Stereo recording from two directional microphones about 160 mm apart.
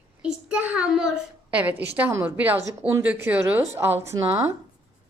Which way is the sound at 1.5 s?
10° right (ahead or behind).